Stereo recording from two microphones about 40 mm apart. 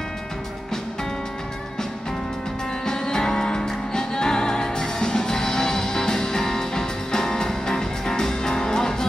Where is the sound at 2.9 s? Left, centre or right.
Centre.